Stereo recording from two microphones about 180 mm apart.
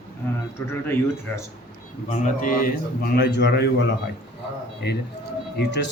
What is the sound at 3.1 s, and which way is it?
Speech, 70° left (ahead or behind).